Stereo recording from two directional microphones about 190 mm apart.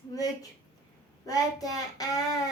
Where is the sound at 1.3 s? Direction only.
20° left (ahead or behind).